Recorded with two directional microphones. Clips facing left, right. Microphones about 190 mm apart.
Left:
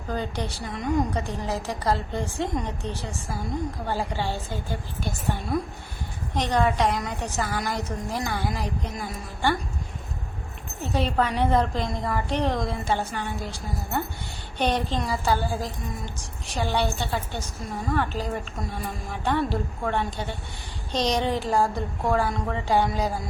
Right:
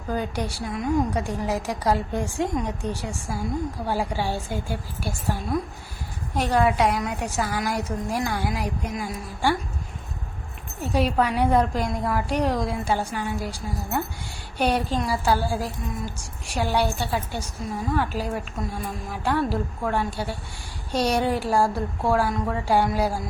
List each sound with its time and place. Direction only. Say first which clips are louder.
0.1 s a woman's voice: right 2 dB; 10° right (ahead or behind)
6.3 s a woman's voice: right 2 dB; 5° right (ahead or behind)
10.9 s a woman's voice: right 2 dB; 10° right (ahead or behind)